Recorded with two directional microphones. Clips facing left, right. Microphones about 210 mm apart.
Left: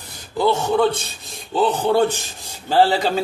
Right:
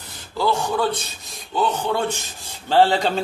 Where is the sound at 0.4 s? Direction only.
25° left (ahead or behind).